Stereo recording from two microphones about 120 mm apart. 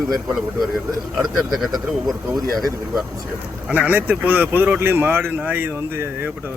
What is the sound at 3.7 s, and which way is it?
Speech, 15° right (ahead or behind).